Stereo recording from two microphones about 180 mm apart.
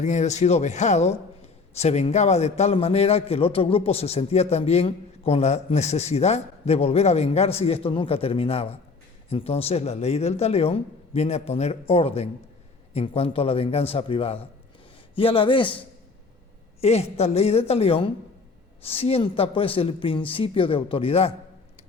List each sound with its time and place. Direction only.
0.0 s a man's voice: 40° left (ahead or behind)
16.8 s a man's voice: 35° left (ahead or behind)